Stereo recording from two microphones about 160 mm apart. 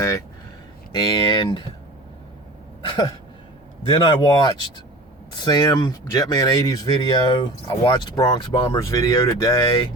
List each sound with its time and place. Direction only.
0.9 s speech: 25° left (ahead or behind)
2.8 s a sound: 30° left (ahead or behind)
3.9 s speech: 30° left (ahead or behind)